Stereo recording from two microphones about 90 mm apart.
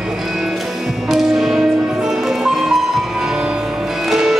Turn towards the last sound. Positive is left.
turn(degrees=-5)  # may be behind; listen again after turning